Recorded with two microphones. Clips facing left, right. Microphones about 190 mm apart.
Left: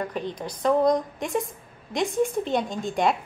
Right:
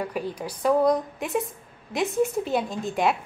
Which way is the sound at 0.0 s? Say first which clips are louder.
Even; 10° right (ahead or behind).